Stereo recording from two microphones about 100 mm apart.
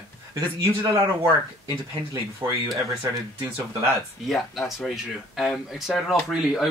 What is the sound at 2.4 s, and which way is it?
Speech, 15° right (ahead or behind).